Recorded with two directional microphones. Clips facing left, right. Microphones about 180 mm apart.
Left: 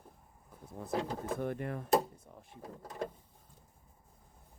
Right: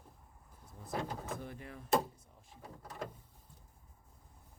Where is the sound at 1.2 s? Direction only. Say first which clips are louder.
Left 8 dB; 60° left (ahead or behind).